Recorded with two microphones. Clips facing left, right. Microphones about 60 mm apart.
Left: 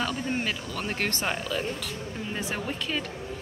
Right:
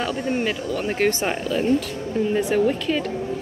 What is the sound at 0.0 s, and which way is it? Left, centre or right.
Speech, centre.